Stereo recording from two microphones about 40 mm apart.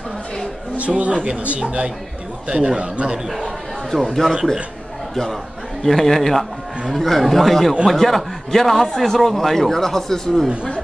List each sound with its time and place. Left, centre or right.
0.7 s speech: right
4.1 s speech: centre
5.8 s a man's voice: centre